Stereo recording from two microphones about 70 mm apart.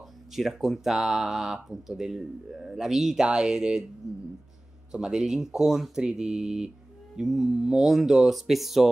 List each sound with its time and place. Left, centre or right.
0.3 s speech: centre